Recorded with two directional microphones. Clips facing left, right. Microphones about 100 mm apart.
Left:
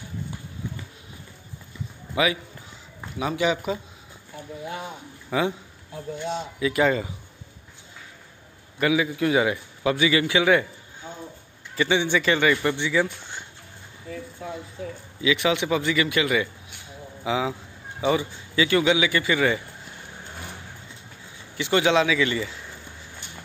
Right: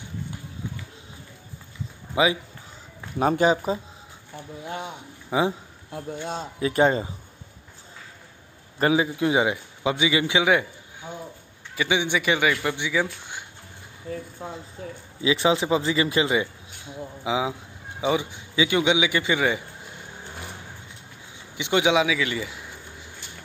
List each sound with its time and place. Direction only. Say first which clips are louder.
2.1 s a man's voice: right 2 dB; 25° right (ahead or behind)
3.2 s speech: right 4 dB; 45° right (ahead or behind)
5.3 s a man's voice: right 1 dB; 20° right (ahead or behind)
6.3 s speech: right 1 dB; 35° right (ahead or behind)
8.7 s a man's voice: right 1 dB; 35° right (ahead or behind)
9.1 s a man's voice: even; 20° right (ahead or behind)
11.7 s a man's voice: left 2 dB; 10° right (ahead or behind)
15.2 s a man's voice: right 1 dB; 30° right (ahead or behind)
17.2 s a man's voice: even; 15° right (ahead or behind)
21.5 s a man's voice: left 1 dB; 15° right (ahead or behind)